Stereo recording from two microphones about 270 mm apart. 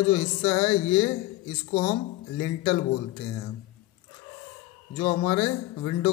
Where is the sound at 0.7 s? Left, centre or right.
Centre.